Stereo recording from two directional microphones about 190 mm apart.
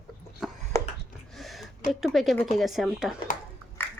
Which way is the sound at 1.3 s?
Centre (ahead or behind).